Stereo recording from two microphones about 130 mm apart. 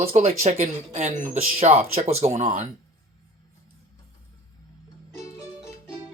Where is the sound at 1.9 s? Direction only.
55° right (ahead or behind).